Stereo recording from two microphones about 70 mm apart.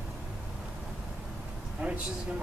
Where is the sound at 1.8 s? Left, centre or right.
Right.